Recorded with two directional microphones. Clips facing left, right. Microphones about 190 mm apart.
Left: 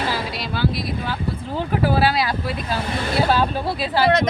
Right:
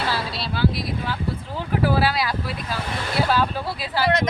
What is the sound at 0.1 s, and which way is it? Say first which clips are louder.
Speech: left 1 dB; 15° left (ahead or behind).